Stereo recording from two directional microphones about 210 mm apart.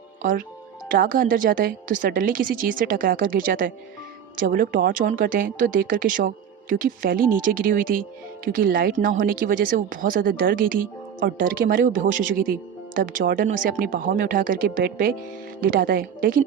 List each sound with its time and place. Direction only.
0.2 s a woman's voice: 40° right (ahead or behind)